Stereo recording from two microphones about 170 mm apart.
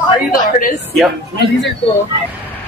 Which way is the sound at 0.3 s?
55° left (ahead or behind).